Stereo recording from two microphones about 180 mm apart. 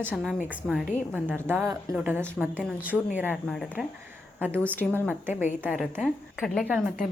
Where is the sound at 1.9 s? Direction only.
10° right (ahead or behind); by 5.1 s 10° left (ahead or behind).